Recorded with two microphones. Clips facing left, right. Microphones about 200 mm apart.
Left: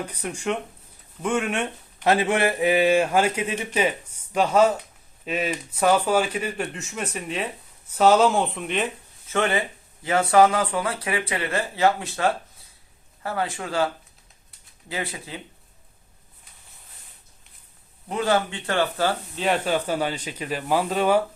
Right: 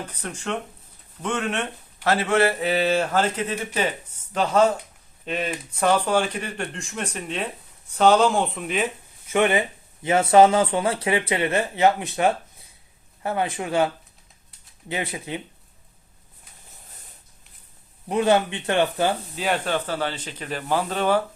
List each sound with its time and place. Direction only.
0.0 s speech: 10° left (ahead or behind)
9.3 s speech: 15° right (ahead or behind)
18.1 s speech: 20° right (ahead or behind)
19.4 s speech: 5° left (ahead or behind)